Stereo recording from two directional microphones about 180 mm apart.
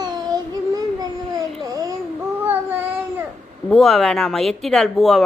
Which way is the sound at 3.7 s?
Centre (ahead or behind).